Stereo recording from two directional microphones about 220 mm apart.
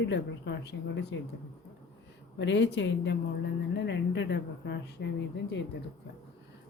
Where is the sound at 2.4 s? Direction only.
50° left (ahead or behind).